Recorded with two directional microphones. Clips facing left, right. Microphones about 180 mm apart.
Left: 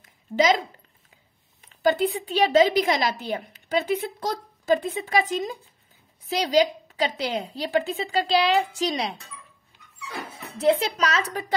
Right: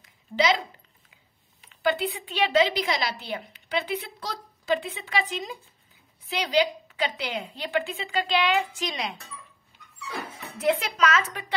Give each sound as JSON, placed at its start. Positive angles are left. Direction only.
{"t": 0.0, "sound": "a sound", "side_deg": 45}
{"t": 1.7, "sound": "a woman's voice", "side_deg": 40}
{"t": 10.6, "sound": "a woman's voice", "side_deg": 30}